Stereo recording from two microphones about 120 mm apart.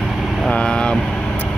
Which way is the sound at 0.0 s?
Centre (ahead or behind).